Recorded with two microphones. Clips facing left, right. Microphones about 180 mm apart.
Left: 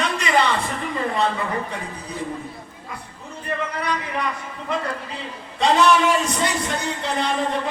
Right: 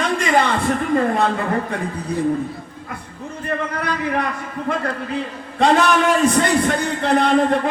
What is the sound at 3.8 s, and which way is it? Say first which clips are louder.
A man's voice: right 4 dB; 55° right (ahead or behind).